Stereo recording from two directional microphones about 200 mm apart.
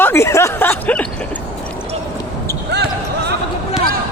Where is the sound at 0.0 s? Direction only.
15° left (ahead or behind).